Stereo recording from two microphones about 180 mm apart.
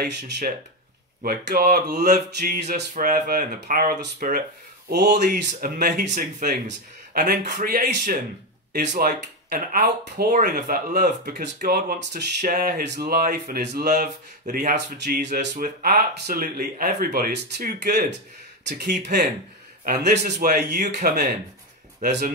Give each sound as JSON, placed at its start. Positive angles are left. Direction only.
{"t": 0.0, "sound": "speech", "side_deg": -60}
{"t": 2.6, "sound": "speech", "side_deg": -45}
{"t": 4.8, "sound": "speech", "side_deg": -70}
{"t": 18.6, "sound": "speech", "side_deg": -75}
{"t": 18.9, "sound": "speech", "side_deg": -45}
{"t": 19.8, "sound": "speech", "side_deg": -60}